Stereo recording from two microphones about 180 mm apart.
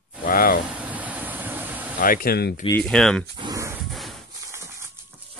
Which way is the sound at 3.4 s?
20° right (ahead or behind).